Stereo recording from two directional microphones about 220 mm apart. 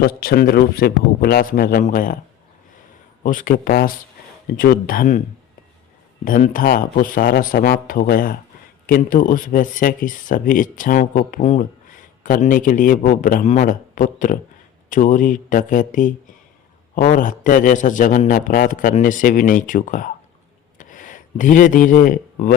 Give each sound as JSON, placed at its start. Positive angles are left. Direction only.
{"t": 0.0, "sound": "a man's voice", "side_deg": 45}
{"t": 3.2, "sound": "speech", "side_deg": 40}
{"t": 6.2, "sound": "speech", "side_deg": 40}
{"t": 20.7, "sound": "a sound", "side_deg": 35}